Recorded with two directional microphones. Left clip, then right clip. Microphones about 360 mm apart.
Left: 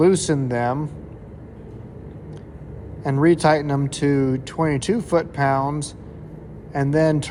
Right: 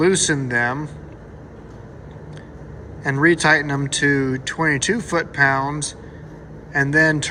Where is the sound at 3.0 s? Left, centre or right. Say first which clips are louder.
Right 1 dB; centre.